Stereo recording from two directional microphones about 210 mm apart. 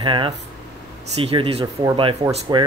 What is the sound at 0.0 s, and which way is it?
Speech, 25° right (ahead or behind).